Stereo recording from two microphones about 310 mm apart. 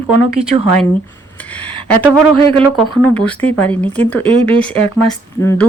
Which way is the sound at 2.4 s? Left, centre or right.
Centre.